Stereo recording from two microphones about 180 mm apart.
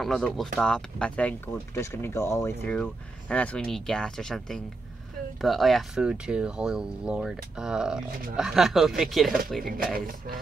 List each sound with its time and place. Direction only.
0.0 s speech: centre (ahead or behind)
9.9 s speech: 55° right (ahead or behind)